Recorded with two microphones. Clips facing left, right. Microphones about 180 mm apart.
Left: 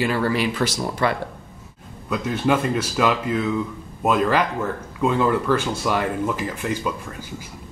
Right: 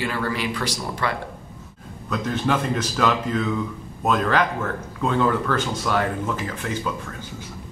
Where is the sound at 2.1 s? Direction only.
5° left (ahead or behind).